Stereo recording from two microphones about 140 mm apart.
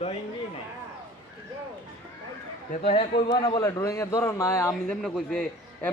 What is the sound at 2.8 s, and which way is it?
Speech, 45° left (ahead or behind).